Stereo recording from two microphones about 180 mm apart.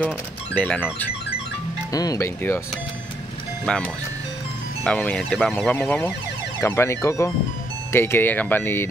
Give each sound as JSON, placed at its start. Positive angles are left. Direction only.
{"t": 0.0, "sound": "speech", "side_deg": 10}
{"t": 1.9, "sound": "speech", "side_deg": 20}
{"t": 3.6, "sound": "speech", "side_deg": 5}